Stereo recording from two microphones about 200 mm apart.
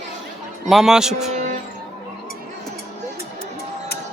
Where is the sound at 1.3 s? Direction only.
40° right (ahead or behind).